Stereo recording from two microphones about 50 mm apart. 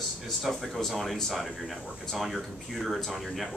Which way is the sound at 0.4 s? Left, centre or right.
Centre.